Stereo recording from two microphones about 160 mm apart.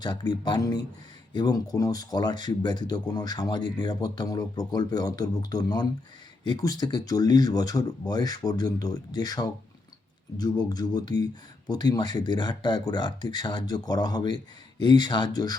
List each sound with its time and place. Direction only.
0.0 s speech: 25° left (ahead or behind)